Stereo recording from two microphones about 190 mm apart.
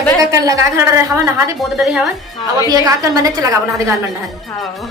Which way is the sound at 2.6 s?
20° right (ahead or behind).